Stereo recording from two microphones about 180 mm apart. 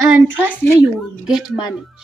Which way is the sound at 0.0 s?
10° right (ahead or behind).